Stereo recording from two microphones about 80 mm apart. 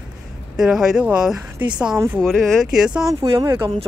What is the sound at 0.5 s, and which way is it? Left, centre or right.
Speech, centre.